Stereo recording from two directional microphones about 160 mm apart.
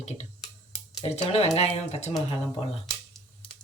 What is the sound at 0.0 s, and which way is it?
Speech, 45° left (ahead or behind).